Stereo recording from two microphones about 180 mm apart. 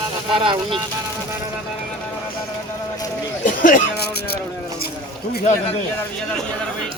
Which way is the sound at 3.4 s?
50° left (ahead or behind).